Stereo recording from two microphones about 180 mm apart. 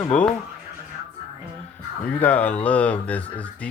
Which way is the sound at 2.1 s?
10° left (ahead or behind).